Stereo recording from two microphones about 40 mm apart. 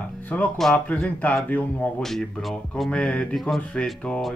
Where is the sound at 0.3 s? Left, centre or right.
Left.